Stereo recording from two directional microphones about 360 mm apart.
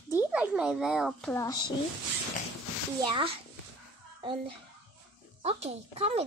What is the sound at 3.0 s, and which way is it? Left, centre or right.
Speech, centre.